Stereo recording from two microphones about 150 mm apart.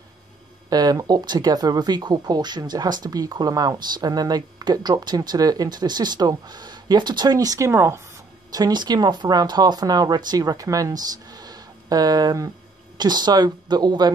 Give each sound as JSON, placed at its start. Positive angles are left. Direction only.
{"t": 0.7, "sound": "speech", "side_deg": -25}